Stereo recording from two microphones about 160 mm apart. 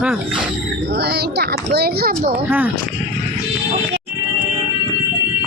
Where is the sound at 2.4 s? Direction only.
10° right (ahead or behind).